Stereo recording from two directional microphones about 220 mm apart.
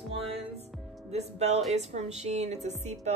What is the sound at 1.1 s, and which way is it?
Speech, 30° right (ahead or behind).